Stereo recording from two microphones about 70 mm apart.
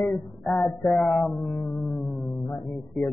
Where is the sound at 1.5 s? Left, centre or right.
Left.